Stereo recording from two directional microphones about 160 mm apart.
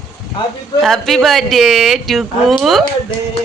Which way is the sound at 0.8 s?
Centre (ahead or behind).